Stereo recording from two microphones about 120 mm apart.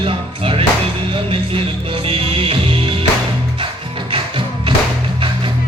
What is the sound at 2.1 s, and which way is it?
Music, 50° right (ahead or behind).